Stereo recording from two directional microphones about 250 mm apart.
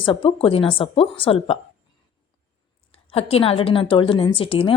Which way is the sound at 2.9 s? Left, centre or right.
Left.